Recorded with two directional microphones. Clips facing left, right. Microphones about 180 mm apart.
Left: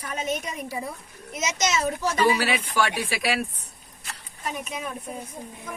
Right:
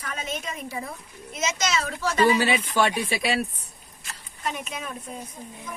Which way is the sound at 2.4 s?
25° right (ahead or behind).